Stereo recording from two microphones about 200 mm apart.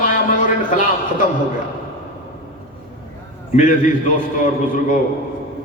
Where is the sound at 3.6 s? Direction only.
40° left (ahead or behind).